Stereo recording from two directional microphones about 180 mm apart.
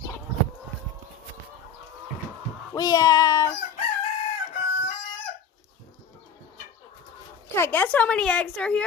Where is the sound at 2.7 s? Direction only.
20° left (ahead or behind).